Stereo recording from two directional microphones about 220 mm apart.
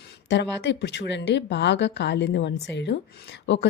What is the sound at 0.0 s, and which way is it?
A woman's voice, 55° left (ahead or behind).